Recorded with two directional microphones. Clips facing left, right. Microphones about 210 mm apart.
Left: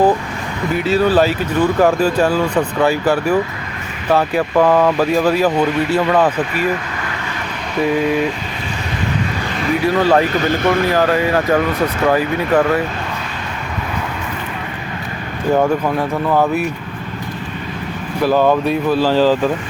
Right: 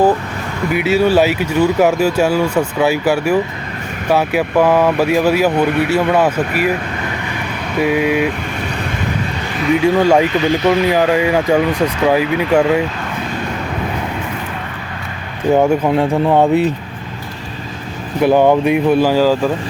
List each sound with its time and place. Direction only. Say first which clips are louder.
0.7 s speech: right 1 dB; 10° right (ahead or behind)
7.8 s speech: right 1 dB; 10° right (ahead or behind)
9.8 s speech: right 1 dB; 15° right (ahead or behind)
15.5 s speech: right 3 dB; 20° right (ahead or behind)
18.2 s speech: right 3 dB; 20° right (ahead or behind)